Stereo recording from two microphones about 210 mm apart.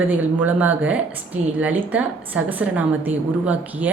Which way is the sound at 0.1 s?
5° right (ahead or behind).